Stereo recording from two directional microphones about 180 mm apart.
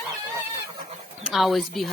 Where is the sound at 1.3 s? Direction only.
Centre (ahead or behind).